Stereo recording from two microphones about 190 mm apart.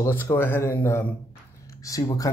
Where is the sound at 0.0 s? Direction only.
15° left (ahead or behind).